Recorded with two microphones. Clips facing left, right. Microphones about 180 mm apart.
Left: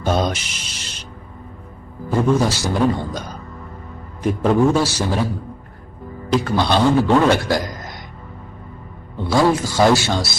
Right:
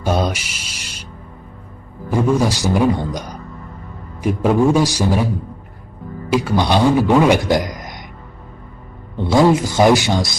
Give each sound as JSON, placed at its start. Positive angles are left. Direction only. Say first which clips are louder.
{"t": 0.0, "sound": "music", "louder": "right 1 dB", "side_deg": -10}
{"t": 2.0, "sound": "a man's voice", "louder": "right 1 dB", "side_deg": -10}
{"t": 6.3, "sound": "a man's voice", "louder": "right 1 dB", "side_deg": -10}
{"t": 9.1, "sound": "a man's voice", "louder": "right 3 dB", "side_deg": -20}